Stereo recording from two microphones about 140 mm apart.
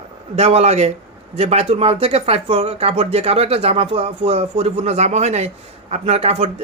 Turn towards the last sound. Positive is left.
turn(degrees=-50)  # may be behind; listen again after turning